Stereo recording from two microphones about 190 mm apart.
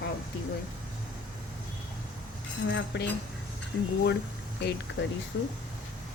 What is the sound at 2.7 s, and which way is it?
Speech, 70° left (ahead or behind).